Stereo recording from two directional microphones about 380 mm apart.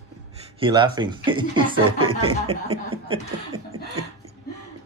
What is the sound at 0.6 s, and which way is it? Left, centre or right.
Speech, centre.